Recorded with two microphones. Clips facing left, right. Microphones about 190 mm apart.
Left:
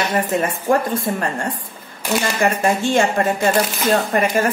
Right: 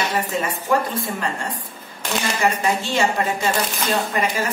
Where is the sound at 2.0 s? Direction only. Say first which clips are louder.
Left 5 dB; 10° left (ahead or behind).